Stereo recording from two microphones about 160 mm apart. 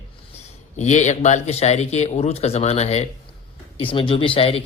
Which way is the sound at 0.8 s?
45° left (ahead or behind).